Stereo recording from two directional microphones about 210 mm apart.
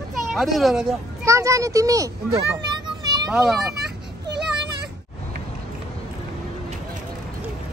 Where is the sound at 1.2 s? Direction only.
15° right (ahead or behind).